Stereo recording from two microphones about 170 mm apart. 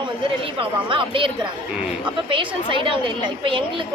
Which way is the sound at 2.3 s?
30° right (ahead or behind).